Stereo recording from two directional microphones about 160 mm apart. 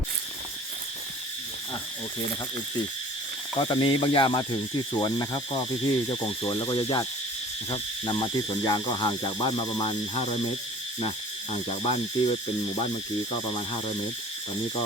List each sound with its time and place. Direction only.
3.6 s speech: 30° left (ahead or behind)
11.9 s speech: 35° left (ahead or behind)